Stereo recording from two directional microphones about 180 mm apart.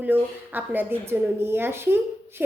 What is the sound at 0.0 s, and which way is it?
A woman's voice, 10° right (ahead or behind).